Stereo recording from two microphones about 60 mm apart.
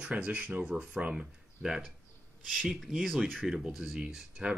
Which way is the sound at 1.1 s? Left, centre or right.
Centre.